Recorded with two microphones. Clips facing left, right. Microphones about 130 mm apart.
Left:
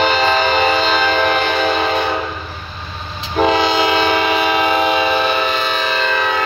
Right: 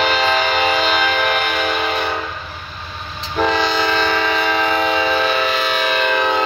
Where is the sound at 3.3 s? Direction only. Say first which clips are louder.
Left 3 dB; 15° left (ahead or behind).